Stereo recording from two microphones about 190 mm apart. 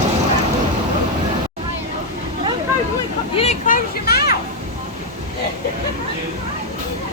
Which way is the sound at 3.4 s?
40° left (ahead or behind).